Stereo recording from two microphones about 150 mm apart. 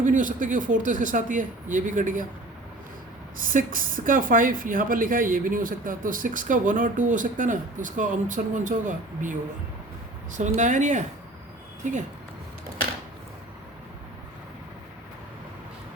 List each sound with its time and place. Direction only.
0.0 s speech: 60° right (ahead or behind)
3.4 s speech: 65° right (ahead or behind)